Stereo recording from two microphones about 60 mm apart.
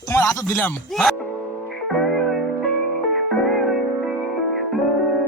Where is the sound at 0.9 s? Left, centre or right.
Centre.